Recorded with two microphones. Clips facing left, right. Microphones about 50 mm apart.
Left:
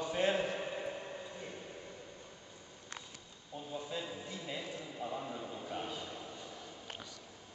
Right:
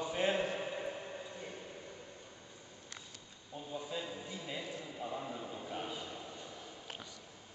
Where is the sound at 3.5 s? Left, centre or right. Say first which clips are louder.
Even; centre.